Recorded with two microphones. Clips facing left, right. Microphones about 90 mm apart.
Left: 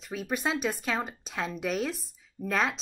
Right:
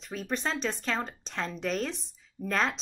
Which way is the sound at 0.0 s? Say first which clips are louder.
Left 2 dB; 5° left (ahead or behind).